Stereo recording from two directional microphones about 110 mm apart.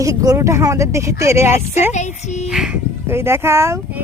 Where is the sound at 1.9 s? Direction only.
90° left.